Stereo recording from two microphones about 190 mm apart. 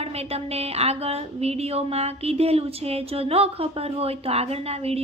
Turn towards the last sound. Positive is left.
turn(degrees=-30)  # may be behind; listen again after turning